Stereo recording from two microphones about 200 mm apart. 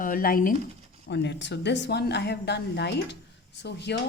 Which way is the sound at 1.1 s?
60° left (ahead or behind).